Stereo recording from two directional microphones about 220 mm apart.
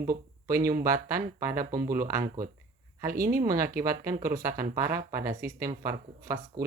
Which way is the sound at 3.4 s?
15° right (ahead or behind).